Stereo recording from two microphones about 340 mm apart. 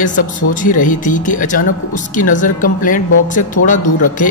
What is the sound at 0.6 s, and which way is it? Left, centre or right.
Speech, left.